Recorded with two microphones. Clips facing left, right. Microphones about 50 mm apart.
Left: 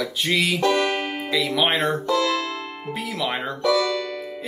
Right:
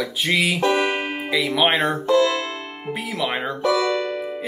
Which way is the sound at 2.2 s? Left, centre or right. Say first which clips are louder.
Right 2 dB; right.